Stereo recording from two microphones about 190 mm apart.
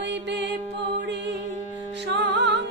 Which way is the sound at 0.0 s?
65° right (ahead or behind).